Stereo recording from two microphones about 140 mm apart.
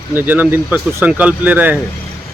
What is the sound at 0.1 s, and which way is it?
Speech, 15° right (ahead or behind).